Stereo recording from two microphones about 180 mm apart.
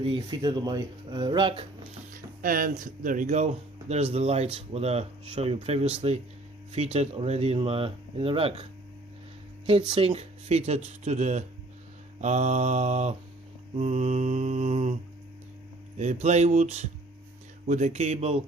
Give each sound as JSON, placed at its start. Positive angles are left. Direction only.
{"t": 0.0, "sound": "speech", "side_deg": -25}
{"t": 2.1, "sound": "music", "side_deg": -50}
{"t": 2.8, "sound": "speech", "side_deg": -50}
{"t": 9.9, "sound": "speech", "side_deg": -30}
{"t": 16.0, "sound": "speech", "side_deg": -40}